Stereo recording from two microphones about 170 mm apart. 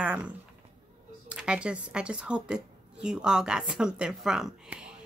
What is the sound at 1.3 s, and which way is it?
A woman's voice, 5° right (ahead or behind).